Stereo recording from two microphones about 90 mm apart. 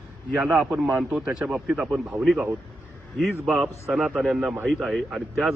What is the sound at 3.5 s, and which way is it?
Speech, 30° right (ahead or behind).